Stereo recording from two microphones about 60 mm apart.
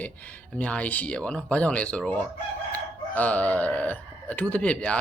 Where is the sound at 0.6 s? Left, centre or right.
Left.